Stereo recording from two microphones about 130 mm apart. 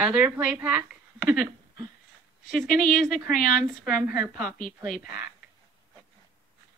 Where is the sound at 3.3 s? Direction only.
90° left.